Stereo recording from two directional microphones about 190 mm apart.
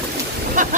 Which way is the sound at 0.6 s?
40° right (ahead or behind).